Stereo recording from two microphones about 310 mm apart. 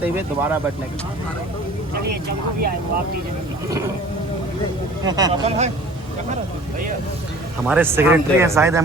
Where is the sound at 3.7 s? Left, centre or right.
Centre.